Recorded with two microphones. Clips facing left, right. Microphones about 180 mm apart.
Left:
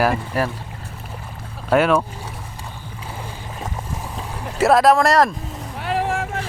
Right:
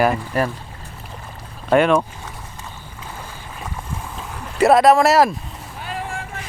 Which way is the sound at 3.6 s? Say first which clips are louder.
Left 1 dB; 15° left (ahead or behind).